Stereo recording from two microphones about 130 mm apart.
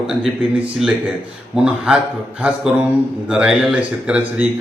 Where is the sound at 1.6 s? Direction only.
5° right (ahead or behind).